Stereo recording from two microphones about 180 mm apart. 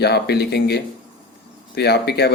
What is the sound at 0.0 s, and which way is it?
Speech, 65° left (ahead or behind).